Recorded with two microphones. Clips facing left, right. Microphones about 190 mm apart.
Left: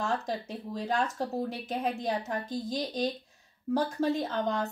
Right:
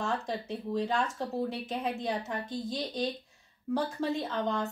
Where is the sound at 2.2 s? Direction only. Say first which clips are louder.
Left 2 dB; 40° left (ahead or behind).